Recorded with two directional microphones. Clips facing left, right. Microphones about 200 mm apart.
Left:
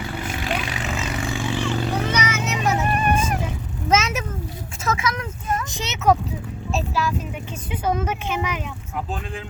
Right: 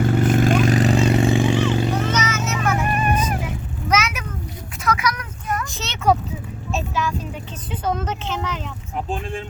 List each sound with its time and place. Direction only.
0.0 s vehicle: 50° right (ahead or behind)
1.3 s vehicle: 20° right (ahead or behind)
2.0 s a sound: 10° left (ahead or behind)
2.8 s music: 35° left (ahead or behind)
3.4 s vehicle: 25° left (ahead or behind)
4.9 s a sound: 25° left (ahead or behind)
6.7 s vehicle: centre (ahead or behind)